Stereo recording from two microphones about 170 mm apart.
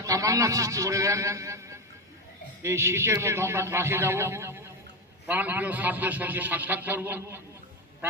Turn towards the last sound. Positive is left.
turn(degrees=-15)  # may be behind; listen again after turning